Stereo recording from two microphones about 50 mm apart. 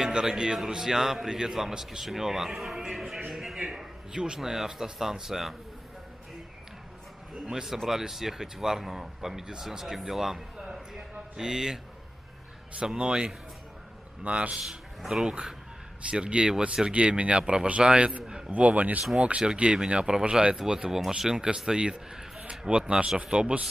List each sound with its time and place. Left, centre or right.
0.0 s a man's voice: centre
3.5 s a sound: centre
4.4 s speech: centre
7.4 s speech: centre
12.8 s speech: centre
15.0 s speech: centre
16.1 s speech: right